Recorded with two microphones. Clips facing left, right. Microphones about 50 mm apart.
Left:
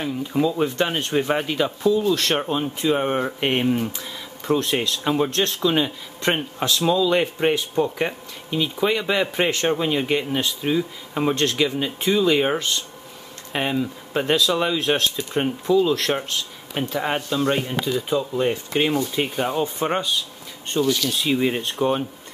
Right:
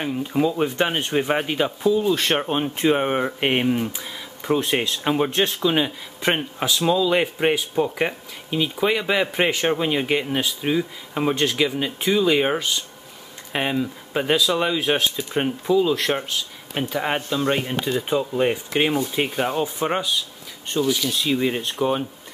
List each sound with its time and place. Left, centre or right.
0.3 s speech: centre